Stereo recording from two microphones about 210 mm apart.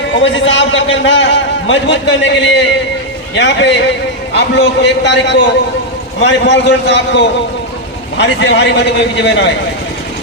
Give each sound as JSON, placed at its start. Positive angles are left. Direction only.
{"t": 0.1, "sound": "a man's voice", "side_deg": 60}